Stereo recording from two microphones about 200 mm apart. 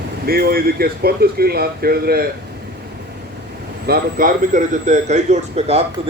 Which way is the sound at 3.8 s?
45° right (ahead or behind).